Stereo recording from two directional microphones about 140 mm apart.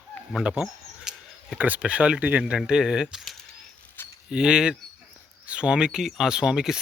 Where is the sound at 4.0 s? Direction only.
15° left (ahead or behind).